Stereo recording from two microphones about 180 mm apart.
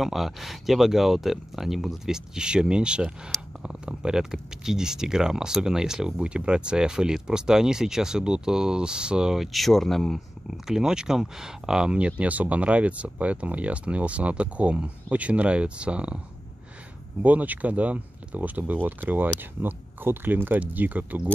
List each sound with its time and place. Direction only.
0.0 s speech: centre (ahead or behind)
17.2 s speech: 10° right (ahead or behind)